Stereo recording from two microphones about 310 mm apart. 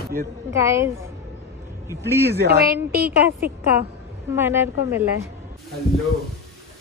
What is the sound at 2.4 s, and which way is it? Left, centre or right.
Speech, right.